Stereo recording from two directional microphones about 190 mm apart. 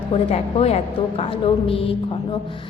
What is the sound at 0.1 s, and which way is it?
A woman's voice, 30° left (ahead or behind).